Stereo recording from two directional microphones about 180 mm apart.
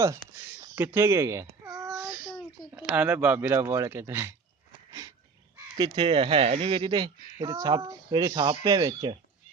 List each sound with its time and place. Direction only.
0.7 s babbling: 15° right (ahead or behind)
2.7 s speech: 10° right (ahead or behind)
5.8 s speech: 30° right (ahead or behind)